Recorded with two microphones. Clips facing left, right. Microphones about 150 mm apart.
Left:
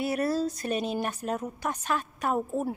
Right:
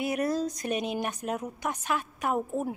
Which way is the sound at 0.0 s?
15° right (ahead or behind).